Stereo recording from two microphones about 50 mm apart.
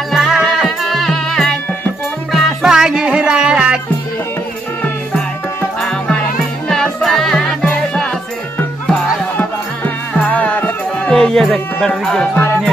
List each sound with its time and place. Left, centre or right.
0.1 s music: centre
2.7 s music: centre
5.8 s music: centre
9.4 s music: left
11.1 s music: centre